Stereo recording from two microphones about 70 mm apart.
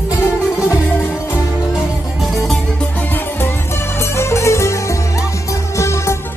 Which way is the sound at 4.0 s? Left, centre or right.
Left.